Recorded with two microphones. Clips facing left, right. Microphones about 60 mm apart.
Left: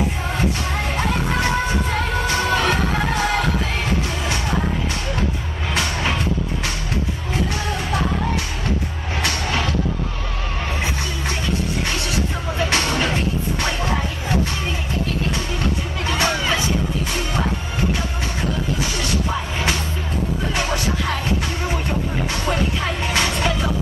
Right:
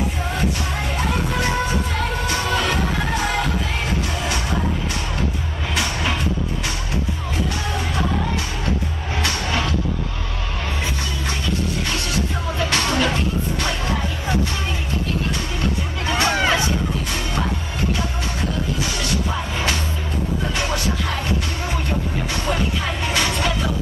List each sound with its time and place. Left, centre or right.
0.9 s music: left
12.5 s music: left
16.3 s hubbub: right
20.5 s music: left
23.1 s music: left